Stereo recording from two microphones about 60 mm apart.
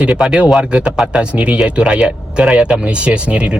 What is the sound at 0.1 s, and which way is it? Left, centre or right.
A man's voice, centre.